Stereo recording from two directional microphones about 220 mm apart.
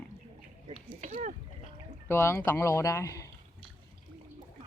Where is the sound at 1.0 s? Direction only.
35° right (ahead or behind).